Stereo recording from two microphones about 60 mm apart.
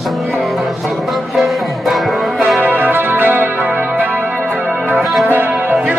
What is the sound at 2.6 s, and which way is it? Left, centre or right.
Music, right.